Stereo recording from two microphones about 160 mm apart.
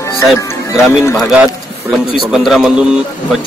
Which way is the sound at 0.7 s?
Centre (ahead or behind).